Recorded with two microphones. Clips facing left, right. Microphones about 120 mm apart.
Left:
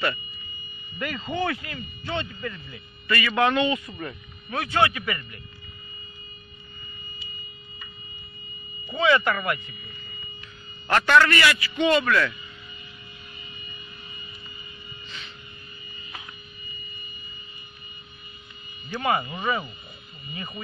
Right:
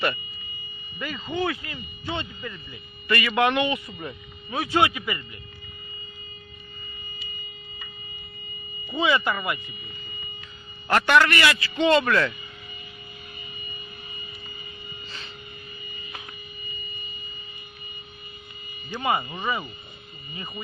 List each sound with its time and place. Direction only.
0.9 s a man's voice: centre (ahead or behind)
3.1 s speech: 20° right (ahead or behind)
8.9 s speech: 10° right (ahead or behind)
10.9 s speech: 15° right (ahead or behind)
18.9 s a man's voice: 10° right (ahead or behind)